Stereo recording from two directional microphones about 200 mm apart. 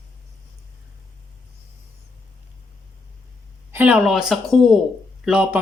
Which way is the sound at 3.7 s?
10° right (ahead or behind).